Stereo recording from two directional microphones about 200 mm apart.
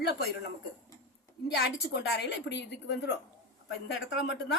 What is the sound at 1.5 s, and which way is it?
Speech, 55° left (ahead or behind).